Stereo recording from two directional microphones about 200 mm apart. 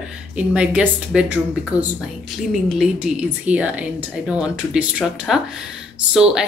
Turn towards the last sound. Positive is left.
turn(degrees=-5)  # may be behind; listen again after turning